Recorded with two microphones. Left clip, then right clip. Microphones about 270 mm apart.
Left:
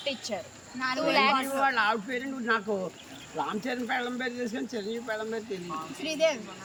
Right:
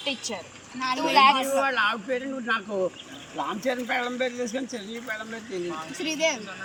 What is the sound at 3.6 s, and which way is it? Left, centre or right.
Speech, centre.